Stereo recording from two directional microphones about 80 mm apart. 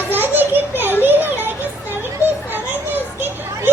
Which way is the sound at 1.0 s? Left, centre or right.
Right.